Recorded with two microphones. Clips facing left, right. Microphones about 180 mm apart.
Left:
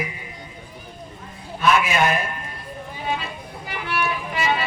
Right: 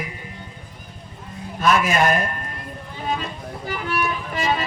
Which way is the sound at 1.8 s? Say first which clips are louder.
Right 2 dB; 45° right (ahead or behind).